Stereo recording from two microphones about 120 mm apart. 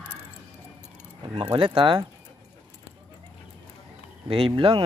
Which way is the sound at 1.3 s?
45° right (ahead or behind).